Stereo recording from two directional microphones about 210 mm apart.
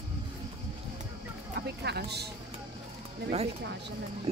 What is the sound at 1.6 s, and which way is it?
Vehicle, 50° right (ahead or behind).